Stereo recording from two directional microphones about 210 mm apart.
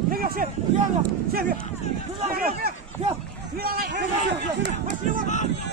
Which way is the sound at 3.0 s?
30° right (ahead or behind).